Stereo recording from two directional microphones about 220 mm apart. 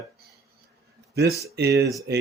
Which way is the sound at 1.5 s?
50° right (ahead or behind).